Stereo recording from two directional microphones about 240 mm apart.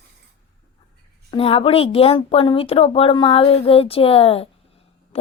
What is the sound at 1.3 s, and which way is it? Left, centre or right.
Speech, left.